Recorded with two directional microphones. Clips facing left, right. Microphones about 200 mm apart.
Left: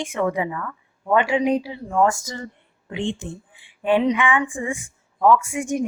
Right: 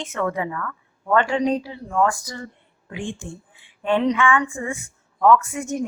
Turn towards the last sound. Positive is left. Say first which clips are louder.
# left 2 dB
turn(degrees=15)  # may be behind; listen again after turning